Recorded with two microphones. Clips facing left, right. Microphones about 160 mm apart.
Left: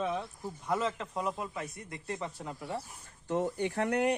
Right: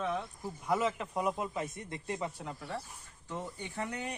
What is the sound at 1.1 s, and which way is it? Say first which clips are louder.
Speech: right 2 dB; 20° right (ahead or behind).